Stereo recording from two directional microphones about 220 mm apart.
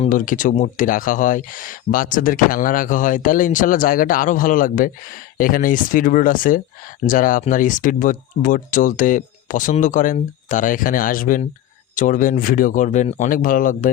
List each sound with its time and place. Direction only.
0.0 s speech: 35° left (ahead or behind)